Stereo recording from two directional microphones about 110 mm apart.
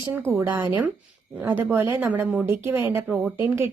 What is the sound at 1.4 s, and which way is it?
A woman's voice, 20° right (ahead or behind).